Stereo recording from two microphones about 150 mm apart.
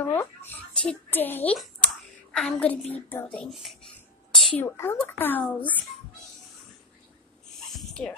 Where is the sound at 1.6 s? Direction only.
Centre (ahead or behind).